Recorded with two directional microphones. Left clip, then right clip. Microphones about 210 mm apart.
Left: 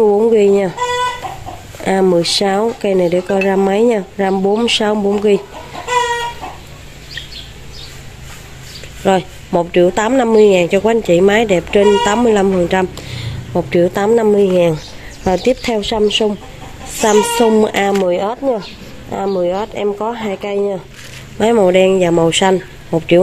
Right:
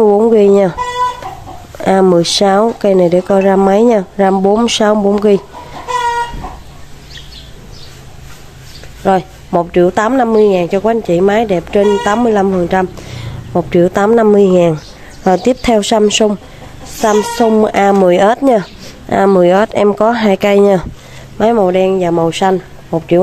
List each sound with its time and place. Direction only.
0.0 s chicken: 20° right (ahead or behind)
1.8 s a woman's voice: 15° right (ahead or behind)
9.0 s a woman's voice: 10° right (ahead or behind); by 16.3 s 30° right (ahead or behind)
17.4 s a woman's voice: 15° right (ahead or behind)
17.9 s speech: 35° right (ahead or behind)
21.4 s speech: 5° right (ahead or behind)